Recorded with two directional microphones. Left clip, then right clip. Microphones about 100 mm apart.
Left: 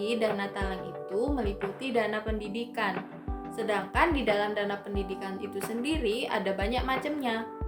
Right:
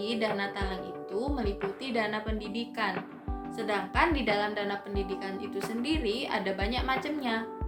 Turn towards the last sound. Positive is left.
turn(degrees=35)  # may be behind; listen again after turning